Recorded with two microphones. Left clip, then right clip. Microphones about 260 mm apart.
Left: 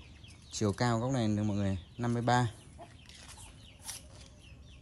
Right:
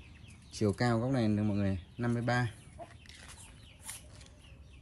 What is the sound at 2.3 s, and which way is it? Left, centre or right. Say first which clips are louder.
Speech: left 5 dB; left.